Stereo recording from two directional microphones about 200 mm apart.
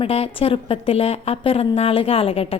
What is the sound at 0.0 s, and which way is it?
A woman's voice, 30° left (ahead or behind).